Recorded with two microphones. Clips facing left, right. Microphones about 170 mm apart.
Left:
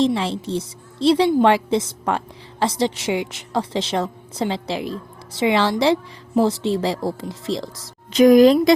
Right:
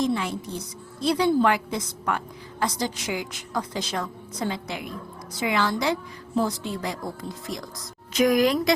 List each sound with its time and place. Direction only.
0.0 s a woman's voice: 30° left (ahead or behind)